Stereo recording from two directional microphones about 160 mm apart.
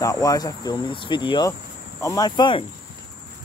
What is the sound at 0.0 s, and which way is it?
Speech, 20° left (ahead or behind).